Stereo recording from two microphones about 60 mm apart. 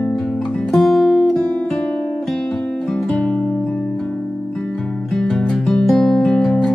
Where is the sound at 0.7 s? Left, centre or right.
Centre.